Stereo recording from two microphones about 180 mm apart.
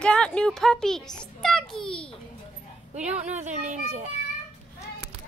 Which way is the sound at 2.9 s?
40° right (ahead or behind).